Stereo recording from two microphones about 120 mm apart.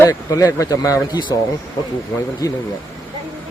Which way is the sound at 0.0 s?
30° left (ahead or behind).